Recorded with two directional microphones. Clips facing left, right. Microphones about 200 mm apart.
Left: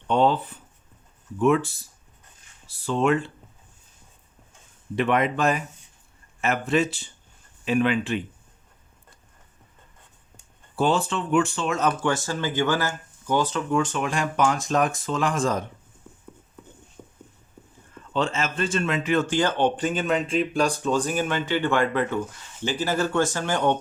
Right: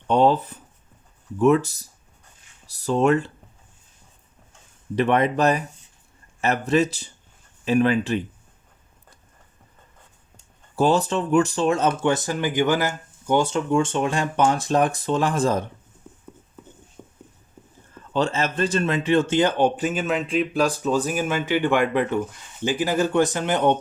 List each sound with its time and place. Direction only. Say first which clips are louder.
0.1 s speech: right 3 dB; 40° right (ahead or behind)
4.9 s speech: right 3 dB; 35° right (ahead or behind)
10.8 s speech: right 3 dB; 40° right (ahead or behind)
17.0 s clip-clop: right 1 dB; 15° right (ahead or behind)
18.1 s speech: right 3 dB; 35° right (ahead or behind); by 23.7 s 20° right (ahead or behind)